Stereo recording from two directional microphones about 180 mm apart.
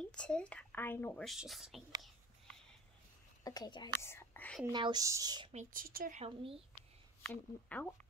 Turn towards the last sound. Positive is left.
turn(degrees=10)  # may be behind; listen again after turning